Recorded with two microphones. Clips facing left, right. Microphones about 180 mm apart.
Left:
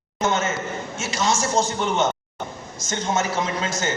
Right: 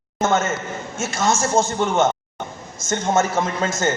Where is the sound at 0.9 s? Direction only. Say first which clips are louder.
Right 3 dB; 50° right (ahead or behind).